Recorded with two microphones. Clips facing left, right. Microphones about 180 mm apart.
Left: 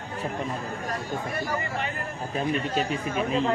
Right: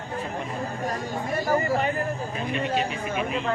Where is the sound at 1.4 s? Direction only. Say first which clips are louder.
Right 7 dB; 45° right (ahead or behind).